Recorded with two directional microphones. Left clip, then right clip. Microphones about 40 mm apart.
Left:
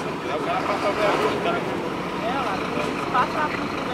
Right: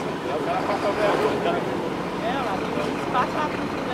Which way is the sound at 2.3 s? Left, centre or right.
Left.